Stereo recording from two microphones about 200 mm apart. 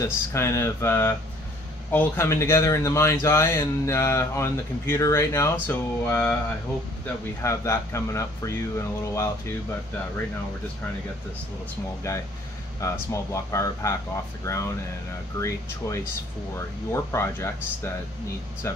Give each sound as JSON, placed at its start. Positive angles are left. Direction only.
{"t": 0.0, "sound": "speech", "side_deg": 15}
{"t": 7.4, "sound": "speech", "side_deg": 15}
{"t": 12.1, "sound": "speech", "side_deg": 15}
{"t": 16.5, "sound": "speech", "side_deg": 15}